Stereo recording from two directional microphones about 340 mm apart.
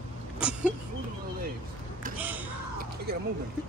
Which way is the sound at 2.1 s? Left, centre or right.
Centre.